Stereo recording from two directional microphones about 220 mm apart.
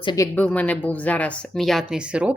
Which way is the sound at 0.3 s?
5° left (ahead or behind).